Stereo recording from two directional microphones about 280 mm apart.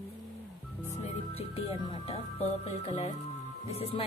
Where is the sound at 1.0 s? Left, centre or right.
Left.